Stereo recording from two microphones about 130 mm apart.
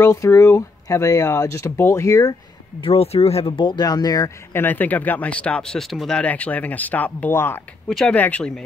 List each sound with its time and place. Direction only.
0.0 s speech: 20° left (ahead or behind)
2.8 s speech: 50° left (ahead or behind); by 4.3 s 30° left (ahead or behind)
4.6 s speech: 15° left (ahead or behind)
7.9 s speech: 5° left (ahead or behind)